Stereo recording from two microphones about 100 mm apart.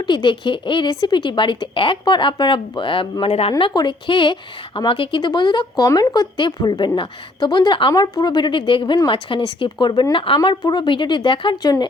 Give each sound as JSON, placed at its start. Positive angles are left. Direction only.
{"t": 0.1, "sound": "speech", "side_deg": 55}
{"t": 3.8, "sound": "a woman's voice", "side_deg": 55}
{"t": 5.8, "sound": "a woman's voice", "side_deg": 40}
{"t": 11.6, "sound": "speech", "side_deg": 40}